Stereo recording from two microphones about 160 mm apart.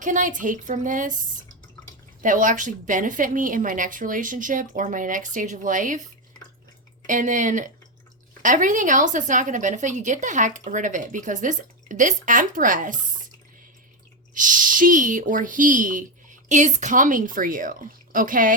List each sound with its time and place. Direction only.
0.0 s a woman's voice: 55° right (ahead or behind)
2.2 s a woman's voice: 55° right (ahead or behind)
7.1 s a woman's voice: 55° right (ahead or behind)
14.3 s a woman's voice: 55° right (ahead or behind)